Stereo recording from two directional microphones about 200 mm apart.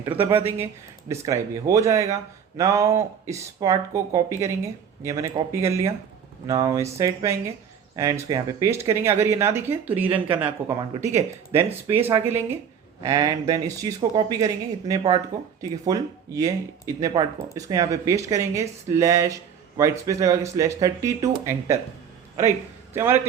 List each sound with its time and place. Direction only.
0.0 s speech: 15° right (ahead or behind)
22.9 s speech: 10° right (ahead or behind)